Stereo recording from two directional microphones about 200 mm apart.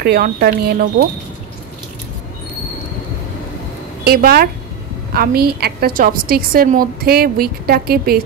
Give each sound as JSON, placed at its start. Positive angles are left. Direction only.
{"t": 0.0, "sound": "a woman's voice", "side_deg": -50}
{"t": 4.0, "sound": "a woman's voice", "side_deg": -50}